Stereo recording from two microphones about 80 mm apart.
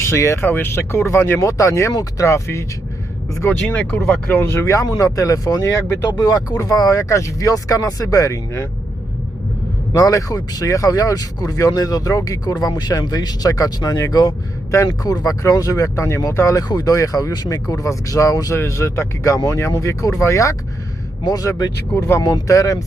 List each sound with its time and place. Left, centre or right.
0.0 s speech: left
6.1 s speech: left
9.9 s speech: left
14.7 s speech: left
15.1 s speech: left
16.6 s speech: left
21.2 s speech: left
21.9 s speech: left
22.2 s speech: left